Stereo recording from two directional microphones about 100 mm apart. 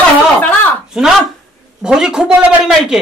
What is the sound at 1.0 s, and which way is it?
Speech, 5° right (ahead or behind).